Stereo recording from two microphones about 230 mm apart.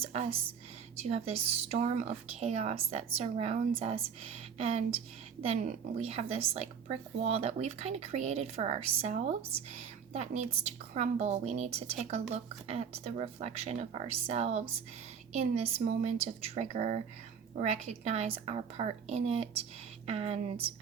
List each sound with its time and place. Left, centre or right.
0.0 s a woman's voice: right
15.6 s a woman's voice: right